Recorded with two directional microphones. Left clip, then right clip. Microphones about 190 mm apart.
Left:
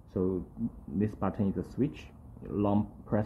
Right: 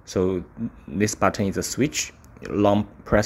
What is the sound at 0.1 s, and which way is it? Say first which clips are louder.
Speech: right 9 dB; 35° right (ahead or behind).